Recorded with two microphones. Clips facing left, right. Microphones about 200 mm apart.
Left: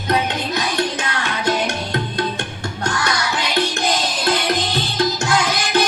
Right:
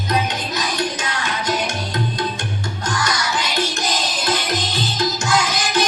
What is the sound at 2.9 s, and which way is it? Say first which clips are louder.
Music: left 1 dB; 60° left (ahead or behind).